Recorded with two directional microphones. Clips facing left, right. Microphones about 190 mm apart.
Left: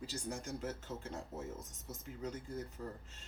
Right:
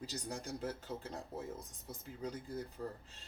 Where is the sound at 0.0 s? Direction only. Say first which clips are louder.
Left 1 dB; 35° right (ahead or behind).